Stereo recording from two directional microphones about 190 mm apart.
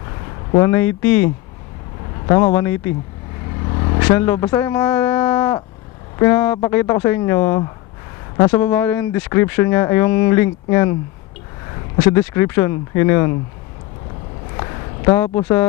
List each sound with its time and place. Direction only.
0.6 s speech: 10° left (ahead or behind)
3.6 s vehicle: 25° left (ahead or behind)
4.1 s speech: 10° left (ahead or behind)
12.1 s speech: 15° left (ahead or behind)
14.6 s a sound: 20° left (ahead or behind)
15.1 s speech: 10° left (ahead or behind)